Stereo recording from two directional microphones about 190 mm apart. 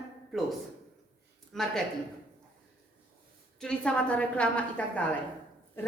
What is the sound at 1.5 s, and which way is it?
Speech, centre (ahead or behind).